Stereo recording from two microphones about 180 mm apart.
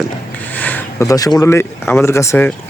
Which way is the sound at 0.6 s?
10° left (ahead or behind).